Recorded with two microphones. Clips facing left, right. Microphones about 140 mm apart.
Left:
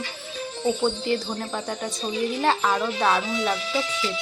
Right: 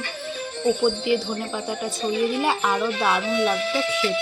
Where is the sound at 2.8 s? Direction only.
10° right (ahead or behind).